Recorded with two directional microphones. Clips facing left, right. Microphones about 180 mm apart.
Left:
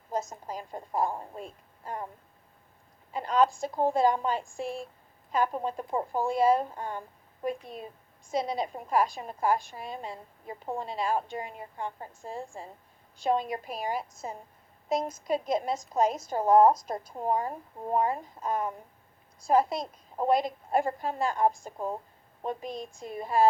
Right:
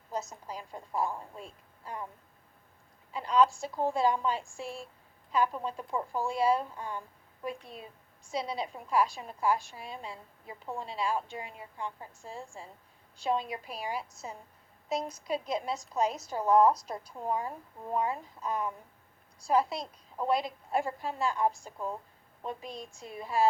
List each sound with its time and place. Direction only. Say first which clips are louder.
0.1 s a woman's voice: left 4 dB; 50° left (ahead or behind)
1.1 s speech: left 3 dB; 35° left (ahead or behind)
1.4 s a woman's voice: left 5 dB; 50° left (ahead or behind)
3.1 s a woman's voice: left 1 dB; 50° left (ahead or behind)
6.1 s a woman's voice: left 4 dB; 50° left (ahead or behind)
8.3 s a woman's voice: left 4 dB; 50° left (ahead or behind)
21.8 s speech: left 3 dB; 35° left (ahead or behind)
22.4 s a woman's voice: left 5 dB; 50° left (ahead or behind)